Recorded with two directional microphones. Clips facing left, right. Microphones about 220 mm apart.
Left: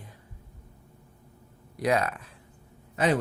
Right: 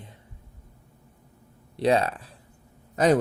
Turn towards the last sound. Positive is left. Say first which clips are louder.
# right 5 dB
turn(degrees=-40)  # may be behind; listen again after turning